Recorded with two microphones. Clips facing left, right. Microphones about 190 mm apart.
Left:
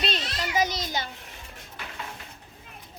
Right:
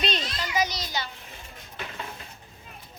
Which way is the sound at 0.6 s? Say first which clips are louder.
Left 2 dB; 50° left (ahead or behind).